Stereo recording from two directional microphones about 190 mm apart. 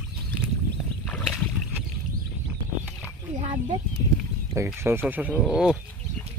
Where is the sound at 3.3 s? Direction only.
35° right (ahead or behind).